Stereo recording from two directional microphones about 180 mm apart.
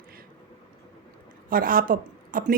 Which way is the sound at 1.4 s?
50° right (ahead or behind).